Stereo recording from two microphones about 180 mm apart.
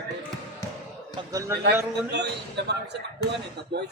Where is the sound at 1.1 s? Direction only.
20° right (ahead or behind).